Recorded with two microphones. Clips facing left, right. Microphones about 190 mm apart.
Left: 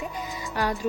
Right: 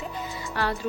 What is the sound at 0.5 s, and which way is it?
Speech, 15° left (ahead or behind).